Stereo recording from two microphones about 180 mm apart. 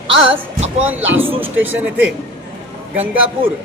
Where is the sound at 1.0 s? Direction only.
90° right.